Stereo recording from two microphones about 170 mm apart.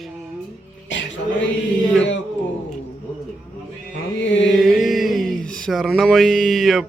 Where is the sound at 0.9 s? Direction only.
90° left.